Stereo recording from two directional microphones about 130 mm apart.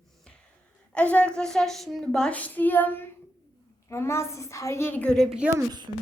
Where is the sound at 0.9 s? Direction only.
10° left (ahead or behind).